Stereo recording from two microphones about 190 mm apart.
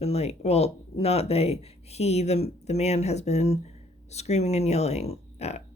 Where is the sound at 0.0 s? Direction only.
35° left (ahead or behind).